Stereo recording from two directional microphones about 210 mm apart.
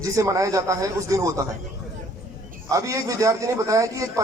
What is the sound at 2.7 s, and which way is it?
Speech, 15° right (ahead or behind).